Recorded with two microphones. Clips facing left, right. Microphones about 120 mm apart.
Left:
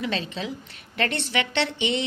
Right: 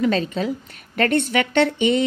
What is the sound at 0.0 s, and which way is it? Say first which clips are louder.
A woman's voice: right 8 dB; 45° right (ahead or behind).